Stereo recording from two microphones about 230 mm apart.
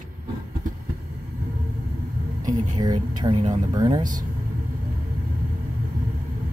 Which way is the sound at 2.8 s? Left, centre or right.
Centre.